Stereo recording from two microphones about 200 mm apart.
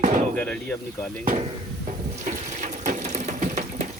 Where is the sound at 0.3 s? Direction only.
5° left (ahead or behind).